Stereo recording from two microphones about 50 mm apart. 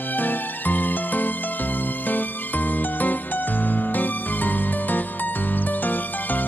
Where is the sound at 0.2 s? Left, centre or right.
Left.